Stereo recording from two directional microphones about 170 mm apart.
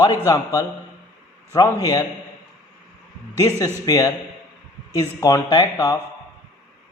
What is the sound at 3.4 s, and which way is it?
A man's voice, 20° left (ahead or behind).